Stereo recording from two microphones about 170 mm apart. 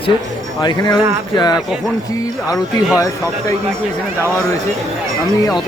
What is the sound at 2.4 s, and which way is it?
Speech, 5° right (ahead or behind).